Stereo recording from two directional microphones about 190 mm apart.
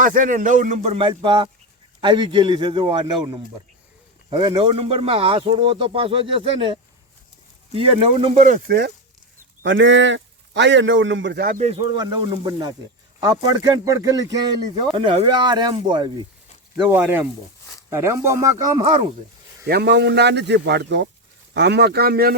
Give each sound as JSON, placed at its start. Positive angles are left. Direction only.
{"t": 0.0, "sound": "speech", "side_deg": -45}
{"t": 8.4, "sound": "speech", "side_deg": -40}
{"t": 9.6, "sound": "a man's voice", "side_deg": -75}
{"t": 11.4, "sound": "speech", "side_deg": -45}
{"t": 11.7, "sound": "speech", "side_deg": -20}
{"t": 16.7, "sound": "speech", "side_deg": -15}
{"t": 19.6, "sound": "a man's voice", "side_deg": -60}